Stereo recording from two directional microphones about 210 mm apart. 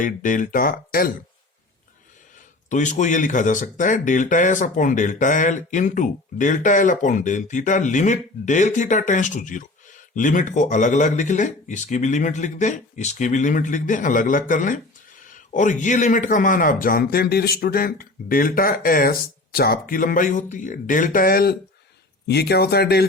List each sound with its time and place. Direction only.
0.0 s speech: 40° left (ahead or behind)
2.6 s speech: 35° left (ahead or behind)